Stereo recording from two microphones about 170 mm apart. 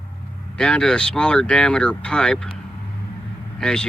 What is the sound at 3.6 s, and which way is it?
Speech, 5° left (ahead or behind).